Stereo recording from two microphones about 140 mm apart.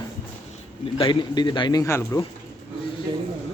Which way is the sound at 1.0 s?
35° left (ahead or behind).